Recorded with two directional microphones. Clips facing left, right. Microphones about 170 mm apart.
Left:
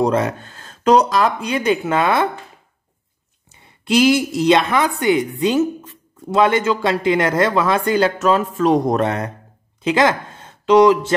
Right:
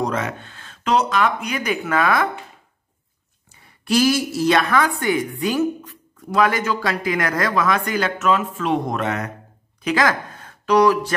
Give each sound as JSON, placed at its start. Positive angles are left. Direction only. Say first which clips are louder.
{"t": 0.0, "sound": "speech", "louder": "left 6 dB", "side_deg": 35}
{"t": 3.5, "sound": "a woman's voice", "louder": "left 3 dB", "side_deg": 20}